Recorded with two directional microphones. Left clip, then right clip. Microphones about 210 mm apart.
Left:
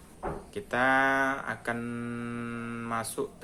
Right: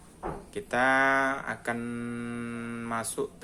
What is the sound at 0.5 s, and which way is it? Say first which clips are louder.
Speech: right 1 dB; 5° right (ahead or behind).